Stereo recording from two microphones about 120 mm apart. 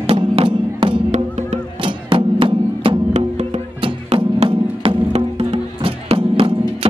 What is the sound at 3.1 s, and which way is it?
Music, 70° right (ahead or behind).